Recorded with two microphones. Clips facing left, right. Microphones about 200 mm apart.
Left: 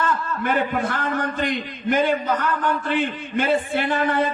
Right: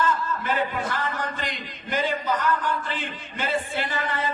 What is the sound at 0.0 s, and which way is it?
A man's voice, 60° left (ahead or behind).